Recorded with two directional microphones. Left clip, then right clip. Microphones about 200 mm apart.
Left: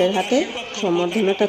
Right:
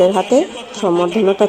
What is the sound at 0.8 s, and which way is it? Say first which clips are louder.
Speech: right 6 dB; 10° right (ahead or behind).